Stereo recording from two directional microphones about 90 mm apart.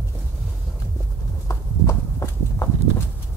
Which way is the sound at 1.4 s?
35° left (ahead or behind).